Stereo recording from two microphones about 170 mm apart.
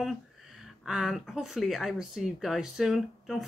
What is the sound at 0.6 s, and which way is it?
Speech, centre (ahead or behind).